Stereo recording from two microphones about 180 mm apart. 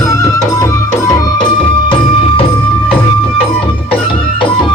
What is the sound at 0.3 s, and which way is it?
Music, 15° left (ahead or behind).